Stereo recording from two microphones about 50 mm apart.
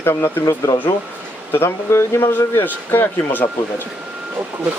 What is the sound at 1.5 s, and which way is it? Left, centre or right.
Speech, left.